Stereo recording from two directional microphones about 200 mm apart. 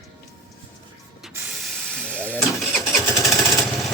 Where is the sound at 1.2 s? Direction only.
10° right (ahead or behind).